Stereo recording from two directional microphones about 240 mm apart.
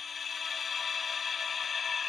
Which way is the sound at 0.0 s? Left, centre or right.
Centre.